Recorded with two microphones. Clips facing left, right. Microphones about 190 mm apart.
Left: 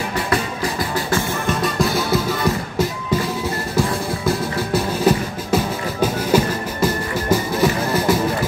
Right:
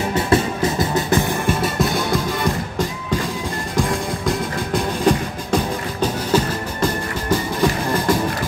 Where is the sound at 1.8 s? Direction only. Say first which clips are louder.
Left 1 dB; 5° left (ahead or behind).